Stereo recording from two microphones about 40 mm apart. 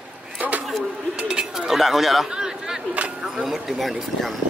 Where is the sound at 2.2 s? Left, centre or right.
Centre.